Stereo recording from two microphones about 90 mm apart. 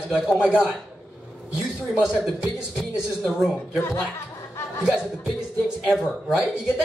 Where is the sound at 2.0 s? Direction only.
10° right (ahead or behind).